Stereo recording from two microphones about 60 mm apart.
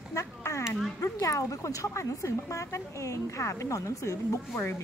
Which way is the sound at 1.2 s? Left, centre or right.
Left.